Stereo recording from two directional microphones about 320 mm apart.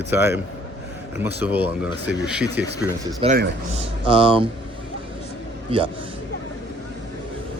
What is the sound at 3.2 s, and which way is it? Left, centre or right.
Speech, right.